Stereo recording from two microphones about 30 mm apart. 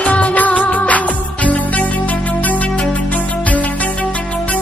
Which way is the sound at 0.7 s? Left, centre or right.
Left.